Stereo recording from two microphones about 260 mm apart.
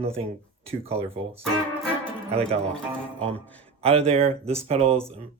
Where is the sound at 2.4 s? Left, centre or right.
Centre.